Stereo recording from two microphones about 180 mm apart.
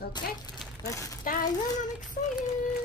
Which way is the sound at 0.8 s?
15° left (ahead or behind).